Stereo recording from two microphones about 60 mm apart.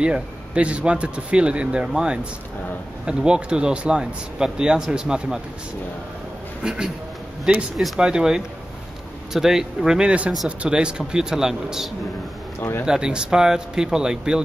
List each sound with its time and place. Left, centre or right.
0.0 s speech: centre
6.6 s speech: centre
7.7 s speech: centre
8.0 s speech: centre
12.5 s a man's voice: left
12.8 s speech: centre